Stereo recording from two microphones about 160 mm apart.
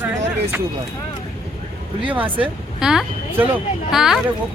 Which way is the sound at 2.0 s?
10° right (ahead or behind).